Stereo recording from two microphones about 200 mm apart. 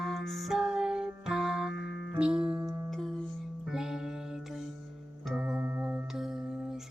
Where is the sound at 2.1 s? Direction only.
5° right (ahead or behind).